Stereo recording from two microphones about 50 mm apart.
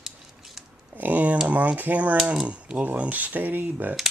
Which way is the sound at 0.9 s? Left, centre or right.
Right.